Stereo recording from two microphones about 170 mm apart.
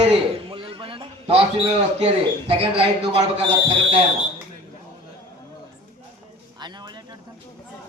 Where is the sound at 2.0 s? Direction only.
35° right (ahead or behind).